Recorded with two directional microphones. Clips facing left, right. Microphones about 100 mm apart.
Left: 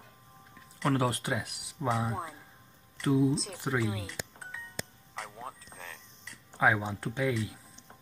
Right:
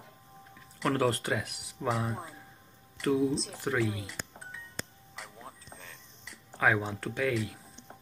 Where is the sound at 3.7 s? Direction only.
10° left (ahead or behind).